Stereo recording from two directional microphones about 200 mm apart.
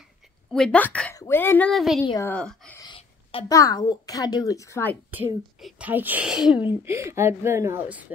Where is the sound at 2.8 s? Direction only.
25° left (ahead or behind).